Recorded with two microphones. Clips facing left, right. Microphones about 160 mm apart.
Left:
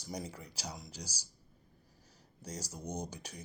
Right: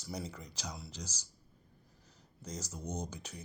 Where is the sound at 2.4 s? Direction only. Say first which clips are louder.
Even; 10° left (ahead or behind).